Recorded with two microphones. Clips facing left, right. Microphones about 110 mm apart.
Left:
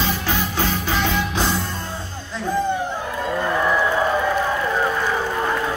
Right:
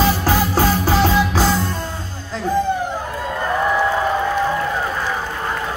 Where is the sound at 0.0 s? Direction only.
40° right (ahead or behind).